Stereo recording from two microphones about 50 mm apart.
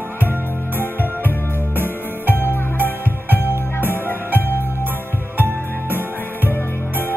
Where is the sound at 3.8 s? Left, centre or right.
Right.